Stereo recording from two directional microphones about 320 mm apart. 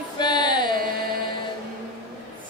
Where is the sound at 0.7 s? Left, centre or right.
Right.